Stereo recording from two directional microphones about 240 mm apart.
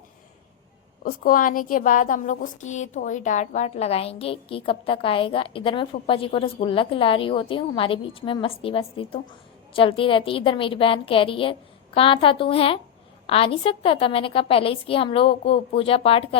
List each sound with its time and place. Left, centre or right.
1.0 s a woman's voice: left